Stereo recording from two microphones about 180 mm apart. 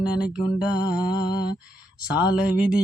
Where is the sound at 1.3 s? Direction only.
25° left (ahead or behind).